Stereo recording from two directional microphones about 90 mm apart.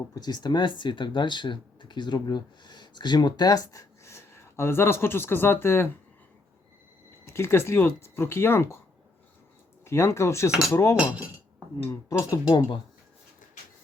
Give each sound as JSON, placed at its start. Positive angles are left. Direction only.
{"t": 0.1, "sound": "speech", "side_deg": 50}
{"t": 7.3, "sound": "speech", "side_deg": 30}
{"t": 9.8, "sound": "speech", "side_deg": 30}
{"t": 12.5, "sound": "speech", "side_deg": 60}